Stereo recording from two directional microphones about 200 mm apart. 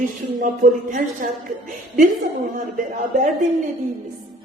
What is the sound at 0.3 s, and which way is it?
A woman's voice, 40° right (ahead or behind).